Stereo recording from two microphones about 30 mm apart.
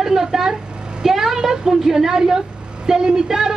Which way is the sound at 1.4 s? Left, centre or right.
Centre.